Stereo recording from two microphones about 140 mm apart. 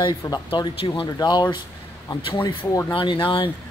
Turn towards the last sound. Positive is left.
turn(degrees=40)  # may be behind; listen again after turning